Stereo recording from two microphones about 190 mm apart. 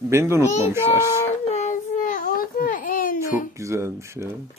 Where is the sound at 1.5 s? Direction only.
40° left (ahead or behind).